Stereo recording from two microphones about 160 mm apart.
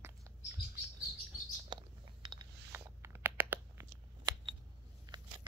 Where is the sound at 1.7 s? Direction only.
25° right (ahead or behind).